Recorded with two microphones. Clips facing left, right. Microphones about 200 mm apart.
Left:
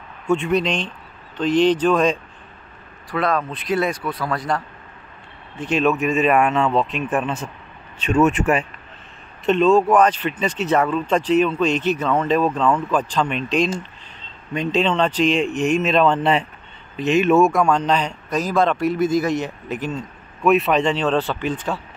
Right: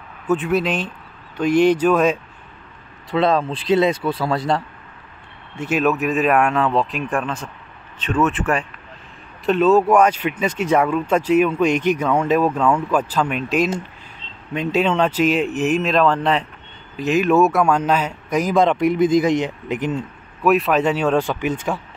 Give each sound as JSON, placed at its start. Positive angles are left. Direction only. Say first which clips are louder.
{"t": 0.3, "sound": "speech", "louder": "even", "side_deg": -5}
{"t": 3.1, "sound": "speech", "louder": "right 4 dB", "side_deg": -25}
{"t": 5.6, "sound": "speech", "louder": "even", "side_deg": -5}
{"t": 9.5, "sound": "speech", "louder": "right 1 dB", "side_deg": -5}
{"t": 20.4, "sound": "speech", "louder": "even", "side_deg": 0}